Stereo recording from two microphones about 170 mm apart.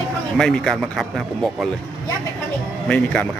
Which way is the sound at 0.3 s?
5° left (ahead or behind).